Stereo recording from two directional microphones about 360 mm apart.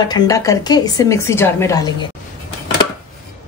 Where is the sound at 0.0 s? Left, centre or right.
Centre.